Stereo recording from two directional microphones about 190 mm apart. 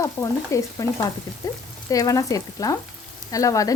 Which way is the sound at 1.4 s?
20° left (ahead or behind).